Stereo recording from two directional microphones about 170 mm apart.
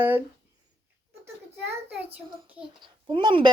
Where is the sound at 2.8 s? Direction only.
30° right (ahead or behind).